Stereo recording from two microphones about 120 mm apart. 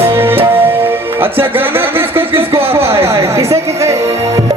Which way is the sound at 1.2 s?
15° right (ahead or behind).